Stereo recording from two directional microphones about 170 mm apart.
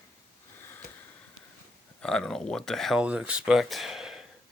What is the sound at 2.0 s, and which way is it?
Speech, 5° left (ahead or behind).